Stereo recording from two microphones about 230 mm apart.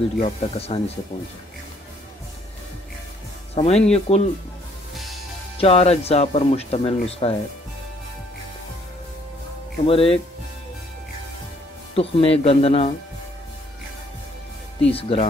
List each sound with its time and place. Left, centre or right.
0.2 s speech: left
3.5 s speech: left
5.6 s speech: left
9.8 s speech: left
11.9 s speech: left
14.9 s speech: left